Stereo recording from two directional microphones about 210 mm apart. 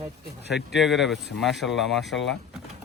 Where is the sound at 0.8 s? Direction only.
Centre (ahead or behind).